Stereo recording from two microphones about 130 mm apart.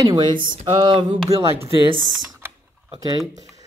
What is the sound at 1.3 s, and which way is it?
Speech, 25° right (ahead or behind).